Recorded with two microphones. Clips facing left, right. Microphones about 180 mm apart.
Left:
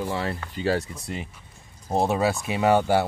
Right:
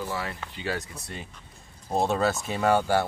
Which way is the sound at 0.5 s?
40° left (ahead or behind).